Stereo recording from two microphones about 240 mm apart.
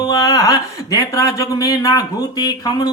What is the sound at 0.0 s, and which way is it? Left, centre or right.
Speech, centre.